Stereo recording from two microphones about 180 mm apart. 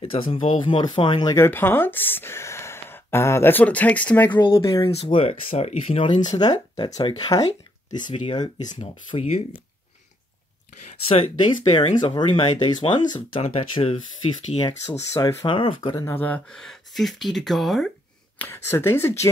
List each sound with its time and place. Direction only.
0.0 s speech: 30° left (ahead or behind); by 4.3 s 10° left (ahead or behind)
4.3 s speech: 25° left (ahead or behind)
6.3 s speech: 20° left (ahead or behind)
6.9 s speech: 35° left (ahead or behind)
7.2 s speech: 20° left (ahead or behind)
11.1 s speech: 30° left (ahead or behind)
14.9 s speech: 15° left (ahead or behind)
15.4 s speech: 30° left (ahead or behind)
16.1 s speech: 10° left (ahead or behind)
18.4 s speech: 10° left (ahead or behind)